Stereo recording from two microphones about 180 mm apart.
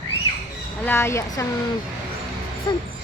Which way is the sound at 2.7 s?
25° left (ahead or behind).